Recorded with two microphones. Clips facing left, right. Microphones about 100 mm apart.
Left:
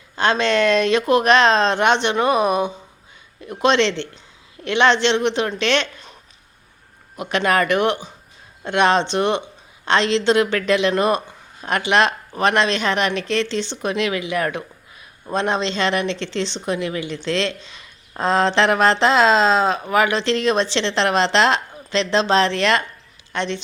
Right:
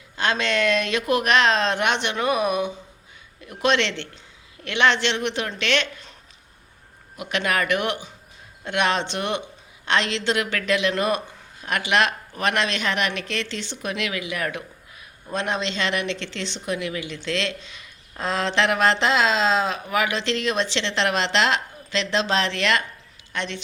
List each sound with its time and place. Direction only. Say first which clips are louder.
0.2 s speech: left 5 dB; 30° left (ahead or behind)
7.2 s speech: left 5 dB; 35° left (ahead or behind)